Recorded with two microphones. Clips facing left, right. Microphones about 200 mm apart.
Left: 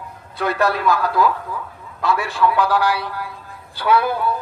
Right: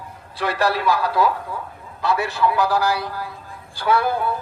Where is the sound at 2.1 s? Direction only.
40° right (ahead or behind).